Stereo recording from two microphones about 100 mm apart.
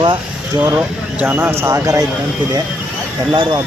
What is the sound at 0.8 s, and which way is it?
Speech, 15° right (ahead or behind).